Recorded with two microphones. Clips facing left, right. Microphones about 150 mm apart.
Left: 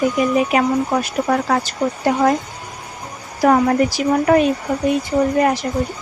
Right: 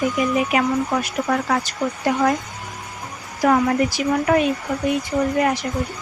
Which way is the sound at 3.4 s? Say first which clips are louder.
Left 3 dB; 40° left (ahead or behind).